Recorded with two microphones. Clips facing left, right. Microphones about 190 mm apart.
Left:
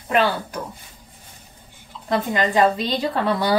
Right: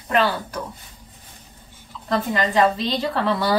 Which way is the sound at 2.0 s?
15° left (ahead or behind).